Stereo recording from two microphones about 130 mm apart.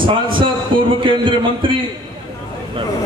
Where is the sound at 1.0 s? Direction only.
40° right (ahead or behind).